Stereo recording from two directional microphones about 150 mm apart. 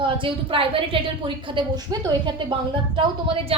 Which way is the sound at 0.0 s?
35° right (ahead or behind).